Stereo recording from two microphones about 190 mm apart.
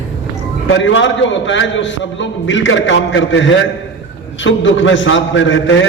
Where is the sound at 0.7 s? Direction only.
75° left (ahead or behind).